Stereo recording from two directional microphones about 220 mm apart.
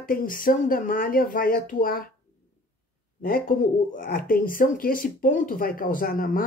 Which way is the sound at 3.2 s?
40° left (ahead or behind).